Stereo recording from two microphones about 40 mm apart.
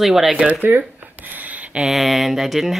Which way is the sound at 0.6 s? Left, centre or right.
Right.